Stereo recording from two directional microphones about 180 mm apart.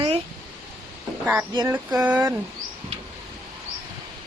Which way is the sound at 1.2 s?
10° right (ahead or behind).